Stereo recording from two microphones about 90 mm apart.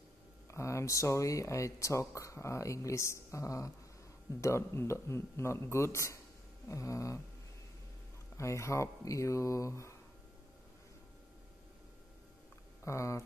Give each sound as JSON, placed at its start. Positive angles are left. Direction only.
{"t": 0.5, "sound": "speech", "side_deg": 35}
{"t": 8.4, "sound": "speech", "side_deg": 35}
{"t": 12.8, "sound": "speech", "side_deg": 35}